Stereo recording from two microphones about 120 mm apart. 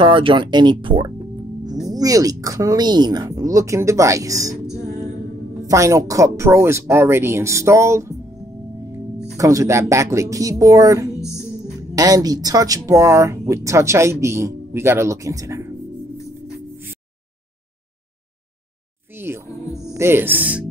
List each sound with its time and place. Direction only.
0.0 s speech: 45° right (ahead or behind); by 4.6 s 30° right (ahead or behind)
5.7 s speech: 25° right (ahead or behind)
19.1 s music: 20° right (ahead or behind)
19.5 s music: 25° left (ahead or behind)
19.9 s speech: 20° right (ahead or behind)